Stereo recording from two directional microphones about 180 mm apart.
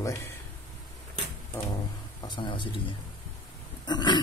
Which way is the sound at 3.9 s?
25° left (ahead or behind).